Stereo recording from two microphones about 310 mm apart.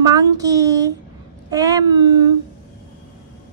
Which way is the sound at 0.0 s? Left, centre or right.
Centre.